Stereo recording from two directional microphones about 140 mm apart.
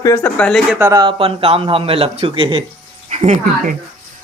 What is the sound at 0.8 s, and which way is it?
Speech, 25° right (ahead or behind).